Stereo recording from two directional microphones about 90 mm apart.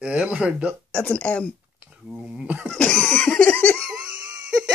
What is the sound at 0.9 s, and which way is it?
Speech, 10° left (ahead or behind).